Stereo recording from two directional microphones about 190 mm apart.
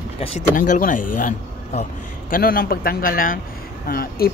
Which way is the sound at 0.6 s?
45° left (ahead or behind).